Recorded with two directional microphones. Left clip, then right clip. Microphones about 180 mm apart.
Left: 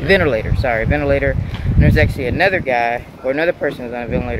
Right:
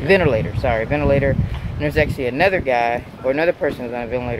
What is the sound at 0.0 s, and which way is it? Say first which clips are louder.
Speech: left 1 dB; 5° right (ahead or behind).